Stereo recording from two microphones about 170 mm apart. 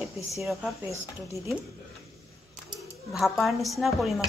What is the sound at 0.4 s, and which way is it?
Speech, centre (ahead or behind).